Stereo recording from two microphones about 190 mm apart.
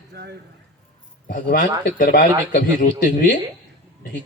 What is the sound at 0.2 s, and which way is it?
Speech, 55° right (ahead or behind).